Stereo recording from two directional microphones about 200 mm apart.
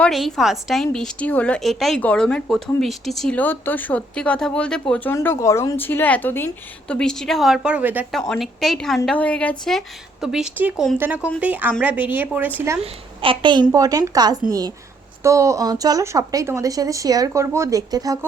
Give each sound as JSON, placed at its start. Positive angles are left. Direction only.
{"t": 0.0, "sound": "a woman's voice", "side_deg": 0}
{"t": 12.8, "sound": "a woman's voice", "side_deg": -25}